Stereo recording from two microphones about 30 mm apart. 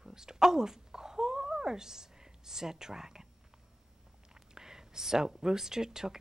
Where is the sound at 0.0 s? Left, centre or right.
Right.